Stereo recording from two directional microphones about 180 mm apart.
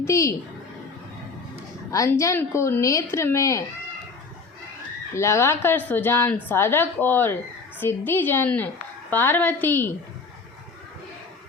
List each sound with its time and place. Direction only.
0.0 s a woman's voice: 15° left (ahead or behind)
1.9 s a woman's voice: 15° left (ahead or behind)
5.1 s a woman's voice: 15° left (ahead or behind)